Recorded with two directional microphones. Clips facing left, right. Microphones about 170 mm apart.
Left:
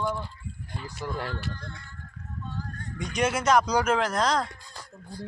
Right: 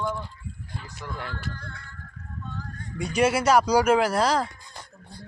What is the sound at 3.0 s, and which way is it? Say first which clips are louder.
Speech: right 5 dB; 10° right (ahead or behind).